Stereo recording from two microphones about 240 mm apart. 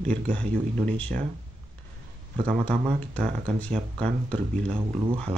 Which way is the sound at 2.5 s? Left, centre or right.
Centre.